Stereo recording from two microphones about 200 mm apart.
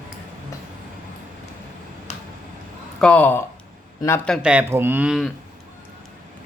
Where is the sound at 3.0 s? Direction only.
5° left (ahead or behind).